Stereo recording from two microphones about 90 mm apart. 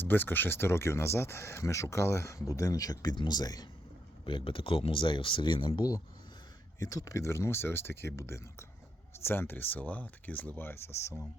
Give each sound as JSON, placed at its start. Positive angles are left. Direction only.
{"t": 0.0, "sound": "speech", "side_deg": 20}
{"t": 4.3, "sound": "speech", "side_deg": 70}
{"t": 6.7, "sound": "speech", "side_deg": 40}